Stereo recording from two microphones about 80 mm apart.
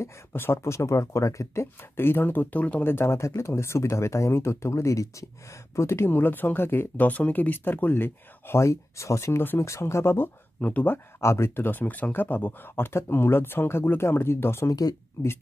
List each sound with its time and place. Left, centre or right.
0.0 s speech: left
2.9 s speech: left
9.4 s speech: left
11.1 s speech: left
14.7 s speech: left